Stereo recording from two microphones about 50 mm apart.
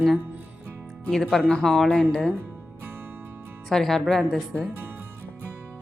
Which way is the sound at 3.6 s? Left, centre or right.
Centre.